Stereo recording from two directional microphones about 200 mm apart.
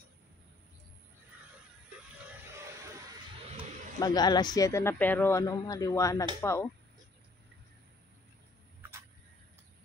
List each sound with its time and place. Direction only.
4.0 s speech: 20° left (ahead or behind)